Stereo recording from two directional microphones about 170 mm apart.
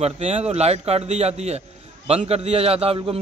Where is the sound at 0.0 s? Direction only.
40° right (ahead or behind).